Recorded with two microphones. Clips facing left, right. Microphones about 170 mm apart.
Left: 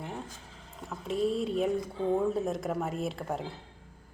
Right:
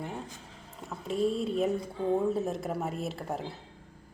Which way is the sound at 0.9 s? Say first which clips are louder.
Even; centre (ahead or behind).